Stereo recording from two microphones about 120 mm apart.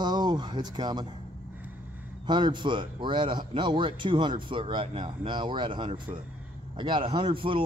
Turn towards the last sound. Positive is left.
turn(degrees=-45)  # may be behind; listen again after turning